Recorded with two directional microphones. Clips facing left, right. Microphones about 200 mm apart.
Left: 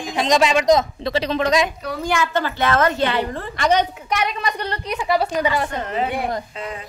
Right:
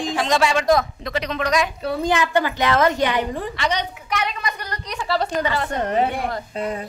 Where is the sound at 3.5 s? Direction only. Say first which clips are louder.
Left 8 dB; 50° left (ahead or behind).